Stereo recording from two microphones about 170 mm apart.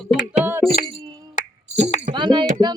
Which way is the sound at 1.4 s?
50° left (ahead or behind).